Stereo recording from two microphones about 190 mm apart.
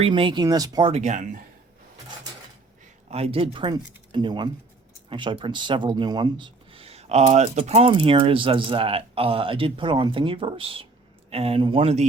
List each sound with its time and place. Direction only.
0.0 s speech: 25° right (ahead or behind)
3.1 s speech: 35° right (ahead or behind)